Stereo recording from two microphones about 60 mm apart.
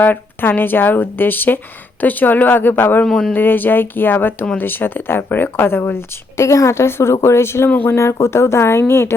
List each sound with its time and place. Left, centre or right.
0.0 s speech: left